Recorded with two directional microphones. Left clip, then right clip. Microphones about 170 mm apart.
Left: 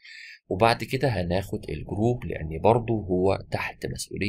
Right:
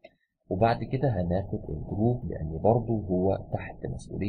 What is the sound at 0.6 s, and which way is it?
Speech, 10° left (ahead or behind).